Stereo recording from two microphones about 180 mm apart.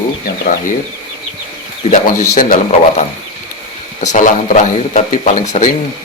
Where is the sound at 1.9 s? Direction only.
45° left (ahead or behind).